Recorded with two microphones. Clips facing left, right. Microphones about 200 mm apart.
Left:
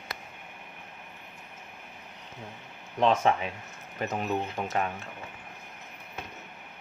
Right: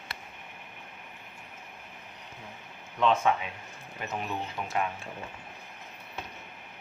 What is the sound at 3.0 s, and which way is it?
Speech, 35° left (ahead or behind).